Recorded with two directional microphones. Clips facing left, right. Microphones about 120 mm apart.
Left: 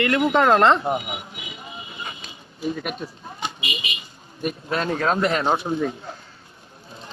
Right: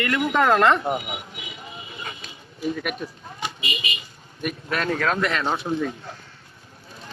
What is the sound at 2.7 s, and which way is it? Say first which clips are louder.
Speech: right 1 dB; 30° left (ahead or behind).